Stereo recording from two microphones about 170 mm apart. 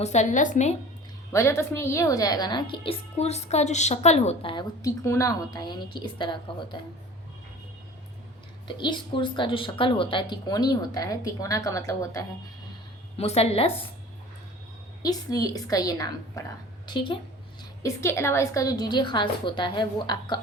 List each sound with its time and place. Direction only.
0.0 s speech: 45° left (ahead or behind)
1.3 s a woman's voice: 15° left (ahead or behind)
8.6 s a woman's voice: 30° left (ahead or behind)
13.1 s a woman's voice: 40° left (ahead or behind)
15.0 s a woman's voice: 20° left (ahead or behind)